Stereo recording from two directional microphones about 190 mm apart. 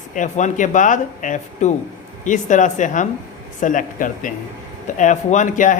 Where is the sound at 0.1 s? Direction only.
40° left (ahead or behind).